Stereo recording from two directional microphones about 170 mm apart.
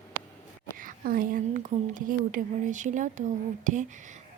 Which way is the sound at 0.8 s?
55° right (ahead or behind).